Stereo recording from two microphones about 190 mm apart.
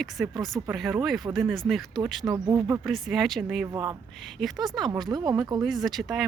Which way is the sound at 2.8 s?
Centre (ahead or behind).